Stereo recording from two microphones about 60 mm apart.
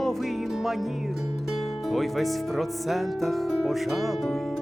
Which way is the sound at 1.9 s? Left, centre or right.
Centre.